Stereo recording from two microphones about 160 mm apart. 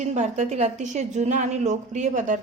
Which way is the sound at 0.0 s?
45° right (ahead or behind).